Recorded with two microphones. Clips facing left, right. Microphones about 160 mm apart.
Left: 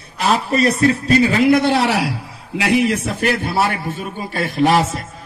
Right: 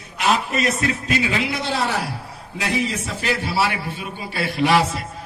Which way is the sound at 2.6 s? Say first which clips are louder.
Left 7 dB; 75° left (ahead or behind).